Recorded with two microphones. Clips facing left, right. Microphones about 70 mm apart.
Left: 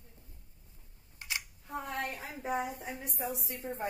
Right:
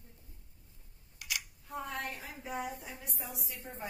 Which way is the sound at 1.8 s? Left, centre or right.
Left.